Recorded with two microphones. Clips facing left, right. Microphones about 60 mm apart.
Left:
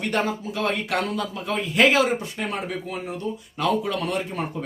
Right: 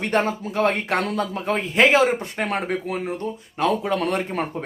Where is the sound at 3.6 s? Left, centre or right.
Right.